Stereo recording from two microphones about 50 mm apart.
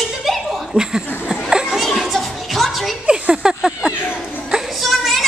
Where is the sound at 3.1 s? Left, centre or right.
Centre.